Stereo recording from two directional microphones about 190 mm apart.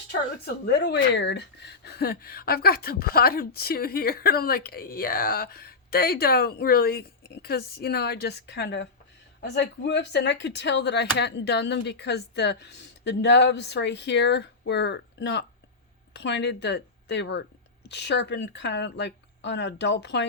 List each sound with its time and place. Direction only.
0.4 s a woman's voice: 60° left (ahead or behind)